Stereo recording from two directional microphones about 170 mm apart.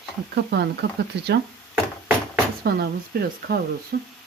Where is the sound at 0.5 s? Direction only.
80° right.